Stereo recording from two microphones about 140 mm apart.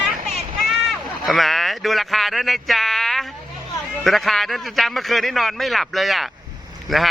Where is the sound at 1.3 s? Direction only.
Centre (ahead or behind).